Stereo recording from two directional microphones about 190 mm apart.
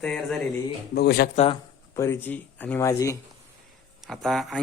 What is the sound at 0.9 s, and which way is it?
Speech, 60° left (ahead or behind).